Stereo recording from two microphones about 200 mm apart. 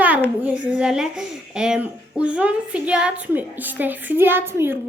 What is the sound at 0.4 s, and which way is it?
A child's voice, 5° right (ahead or behind).